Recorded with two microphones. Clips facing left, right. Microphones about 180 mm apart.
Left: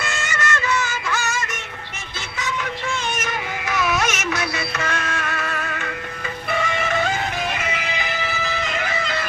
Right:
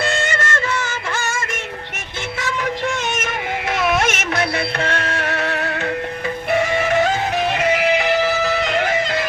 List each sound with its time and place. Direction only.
0.0 s music: 30° right (ahead or behind)
0.3 s music: 50° right (ahead or behind)
4.0 s music: 55° right (ahead or behind)
7.6 s music: 70° right (ahead or behind)